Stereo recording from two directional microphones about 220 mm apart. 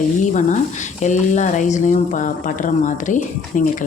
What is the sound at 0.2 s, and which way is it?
Speech, 35° left (ahead or behind).